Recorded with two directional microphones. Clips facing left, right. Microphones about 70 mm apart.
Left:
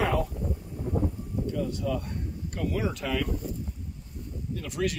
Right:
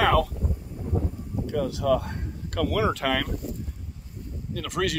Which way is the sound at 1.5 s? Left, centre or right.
Right.